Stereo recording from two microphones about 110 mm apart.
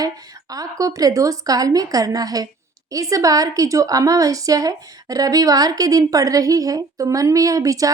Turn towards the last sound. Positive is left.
turn(degrees=-30)  # may be behind; listen again after turning